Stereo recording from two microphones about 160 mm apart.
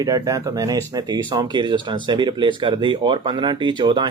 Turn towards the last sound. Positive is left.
turn(degrees=-30)  # may be behind; listen again after turning